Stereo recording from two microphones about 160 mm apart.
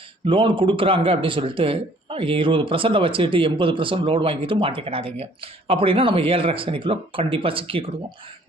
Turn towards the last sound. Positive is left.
turn(degrees=-35)  # may be behind; listen again after turning